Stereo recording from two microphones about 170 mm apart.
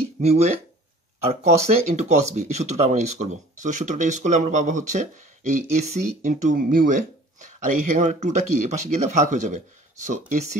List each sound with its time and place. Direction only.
0.2 s speech: 40° right (ahead or behind)